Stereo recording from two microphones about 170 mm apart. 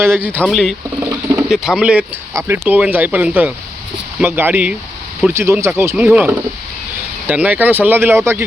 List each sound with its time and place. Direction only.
0.4 s speech: centre (ahead or behind)
0.9 s rodents: 15° right (ahead or behind)
1.5 s speech: 5° right (ahead or behind)